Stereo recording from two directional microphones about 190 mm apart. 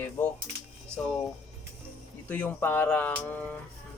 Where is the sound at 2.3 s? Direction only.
10° left (ahead or behind).